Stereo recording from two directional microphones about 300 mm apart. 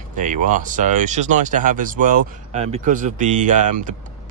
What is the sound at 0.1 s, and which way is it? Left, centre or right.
Speech, right.